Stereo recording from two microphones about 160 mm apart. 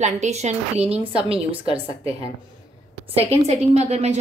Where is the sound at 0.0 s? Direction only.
45° right (ahead or behind).